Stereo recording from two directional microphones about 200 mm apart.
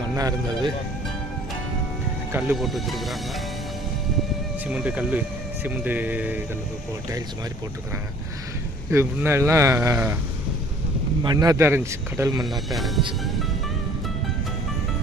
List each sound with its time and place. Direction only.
0.2 s speech: 20° right (ahead or behind)
2.3 s speech: 5° right (ahead or behind)
4.7 s speech: 5° right (ahead or behind)
8.9 s speech: 10° right (ahead or behind)
11.2 s speech: 20° right (ahead or behind)
12.5 s speech: centre (ahead or behind)